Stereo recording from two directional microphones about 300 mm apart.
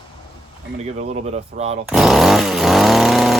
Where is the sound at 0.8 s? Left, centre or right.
Right.